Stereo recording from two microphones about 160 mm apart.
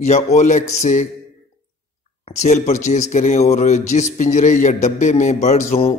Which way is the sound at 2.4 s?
45° left (ahead or behind).